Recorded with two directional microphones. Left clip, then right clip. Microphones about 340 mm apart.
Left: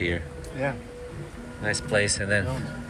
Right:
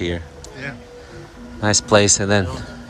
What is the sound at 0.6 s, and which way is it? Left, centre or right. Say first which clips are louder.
Speech: left 3 dB; centre.